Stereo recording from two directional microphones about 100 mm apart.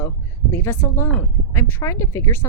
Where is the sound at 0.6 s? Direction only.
25° left (ahead or behind).